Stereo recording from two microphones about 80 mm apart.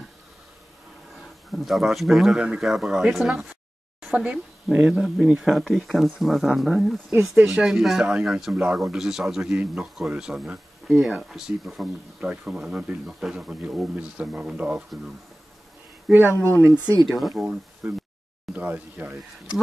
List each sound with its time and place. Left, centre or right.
1.5 s speech: centre
5.4 s speech: centre
16.1 s speech: right
16.7 s speech: right
17.2 s speech: centre
17.8 s speech: centre